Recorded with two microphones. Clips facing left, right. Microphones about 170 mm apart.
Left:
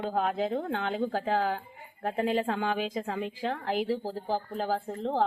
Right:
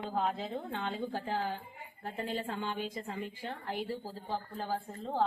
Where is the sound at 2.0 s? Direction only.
85° left.